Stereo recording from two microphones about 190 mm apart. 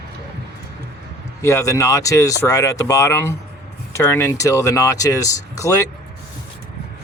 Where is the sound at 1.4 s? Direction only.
15° left (ahead or behind).